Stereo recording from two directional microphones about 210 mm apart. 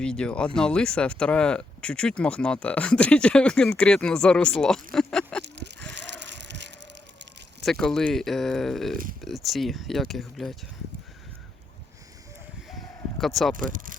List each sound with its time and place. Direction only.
0.0 s speech: 5° left (ahead or behind)
5.9 s bicycle: 55° right (ahead or behind)
7.6 s speech: centre (ahead or behind)
12.6 s a sound: centre (ahead or behind)
13.7 s speech: 40° right (ahead or behind)